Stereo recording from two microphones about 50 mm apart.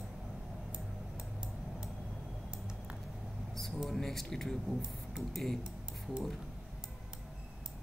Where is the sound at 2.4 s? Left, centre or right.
Centre.